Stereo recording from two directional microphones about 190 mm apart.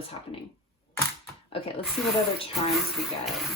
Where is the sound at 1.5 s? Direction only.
30° left (ahead or behind).